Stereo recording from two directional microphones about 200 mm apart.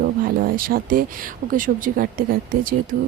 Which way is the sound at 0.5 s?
45° right (ahead or behind).